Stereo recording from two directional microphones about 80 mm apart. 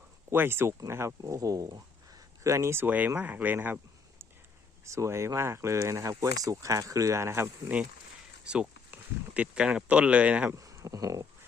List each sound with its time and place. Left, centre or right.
0.3 s speech: right
4.9 s speech: right
8.9 s speech: centre
10.5 s speech: right